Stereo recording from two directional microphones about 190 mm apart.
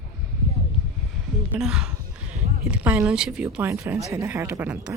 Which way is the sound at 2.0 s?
45° right (ahead or behind).